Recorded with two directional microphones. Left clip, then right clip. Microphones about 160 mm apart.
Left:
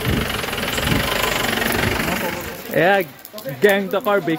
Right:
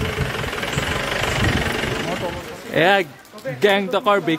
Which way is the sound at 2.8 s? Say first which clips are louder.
Even; 25° right (ahead or behind).